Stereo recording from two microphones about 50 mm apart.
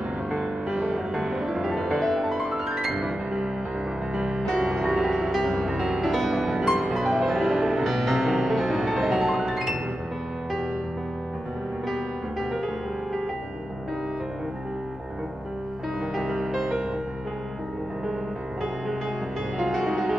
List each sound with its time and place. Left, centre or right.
0.3 s music: centre
4.6 s music: centre
16.2 s music: centre
19.6 s music: centre